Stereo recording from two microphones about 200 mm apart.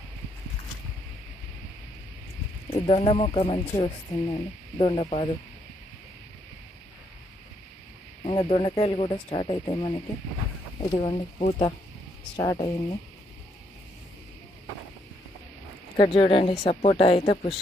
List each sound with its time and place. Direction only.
2.7 s speech: 30° left (ahead or behind)
8.2 s speech: 25° left (ahead or behind)
16.0 s speech: 25° left (ahead or behind)